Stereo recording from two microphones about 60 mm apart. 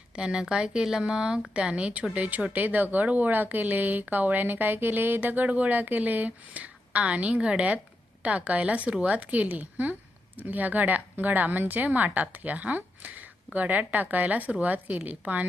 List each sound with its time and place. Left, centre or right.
0.2 s speech: centre